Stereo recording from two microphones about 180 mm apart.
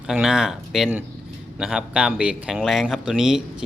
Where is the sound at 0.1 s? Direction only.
5° right (ahead or behind).